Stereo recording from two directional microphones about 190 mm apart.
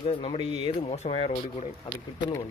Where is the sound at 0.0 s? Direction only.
30° left (ahead or behind).